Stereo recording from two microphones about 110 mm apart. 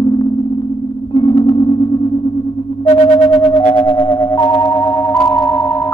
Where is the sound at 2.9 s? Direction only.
75° left (ahead or behind).